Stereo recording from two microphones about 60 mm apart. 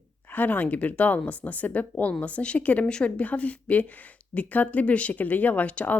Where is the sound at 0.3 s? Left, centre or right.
Left.